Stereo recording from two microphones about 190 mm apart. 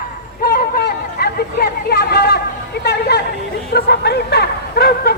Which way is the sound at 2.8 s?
60° left (ahead or behind).